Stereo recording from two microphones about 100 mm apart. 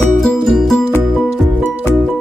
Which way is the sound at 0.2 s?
5° left (ahead or behind).